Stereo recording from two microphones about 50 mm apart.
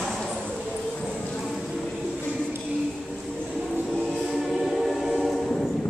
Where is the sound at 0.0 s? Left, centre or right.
Centre.